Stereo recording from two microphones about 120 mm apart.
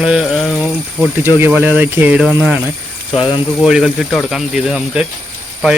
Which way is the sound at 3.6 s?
5° right (ahead or behind).